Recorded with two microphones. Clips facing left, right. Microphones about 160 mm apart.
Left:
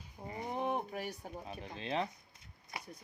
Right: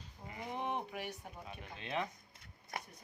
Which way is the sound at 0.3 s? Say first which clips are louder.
Left 4 dB; 40° left (ahead or behind).